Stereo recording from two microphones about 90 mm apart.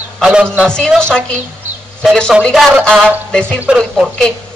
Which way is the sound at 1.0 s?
10° left (ahead or behind).